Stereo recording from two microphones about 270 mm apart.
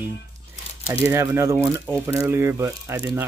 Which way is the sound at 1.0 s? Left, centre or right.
Centre.